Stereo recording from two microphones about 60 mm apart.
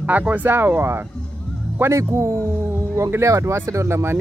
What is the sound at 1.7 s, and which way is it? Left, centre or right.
Speech, right.